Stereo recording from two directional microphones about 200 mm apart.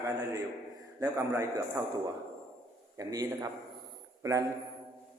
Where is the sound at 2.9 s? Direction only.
20° right (ahead or behind).